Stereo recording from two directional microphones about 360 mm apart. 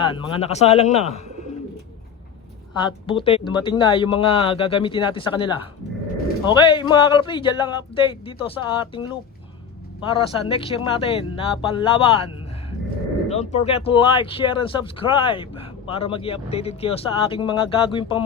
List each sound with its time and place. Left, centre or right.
0.0 s speech: centre
2.8 s speech: centre
10.5 s speech: centre